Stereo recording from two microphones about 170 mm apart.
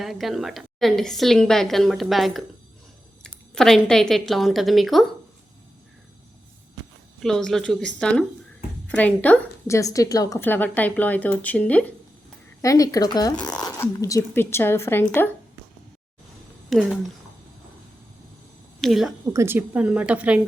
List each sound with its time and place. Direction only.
0.0 s a woman's voice: centre (ahead or behind)
3.5 s a woman's voice: 5° left (ahead or behind)
7.2 s a woman's voice: 5° left (ahead or behind)
12.6 s a woman's voice: 20° left (ahead or behind)
16.6 s speech: centre (ahead or behind)
18.8 s speech: centre (ahead or behind)
19.3 s speech: 15° right (ahead or behind)